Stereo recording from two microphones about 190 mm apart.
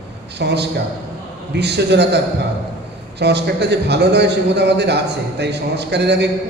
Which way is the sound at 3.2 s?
60° right (ahead or behind).